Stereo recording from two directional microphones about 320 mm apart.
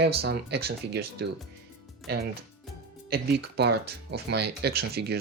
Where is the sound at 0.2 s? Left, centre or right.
Right.